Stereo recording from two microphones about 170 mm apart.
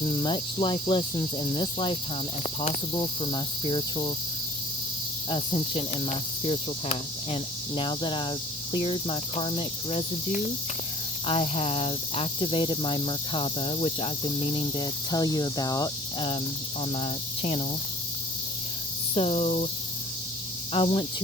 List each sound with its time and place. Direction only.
0.2 s speech: 30° left (ahead or behind)
5.3 s cricket: 35° left (ahead or behind)
11.3 s speech: 35° left (ahead or behind)
16.9 s cricket: 35° left (ahead or behind)
19.1 s cricket: 35° left (ahead or behind)
20.7 s cricket: 35° left (ahead or behind)